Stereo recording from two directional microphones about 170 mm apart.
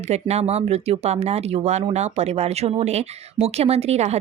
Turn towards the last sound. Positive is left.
turn(degrees=-40)  # may be behind; listen again after turning